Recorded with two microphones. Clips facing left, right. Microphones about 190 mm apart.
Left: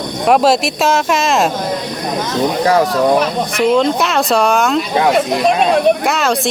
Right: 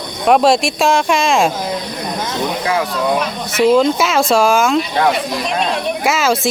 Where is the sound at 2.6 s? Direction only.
40° left (ahead or behind).